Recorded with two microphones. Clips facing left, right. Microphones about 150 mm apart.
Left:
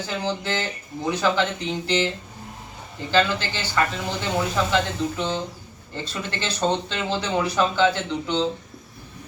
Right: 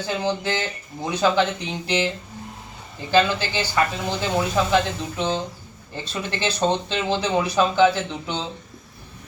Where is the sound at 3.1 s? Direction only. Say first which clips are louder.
Right 2 dB; 15° right (ahead or behind).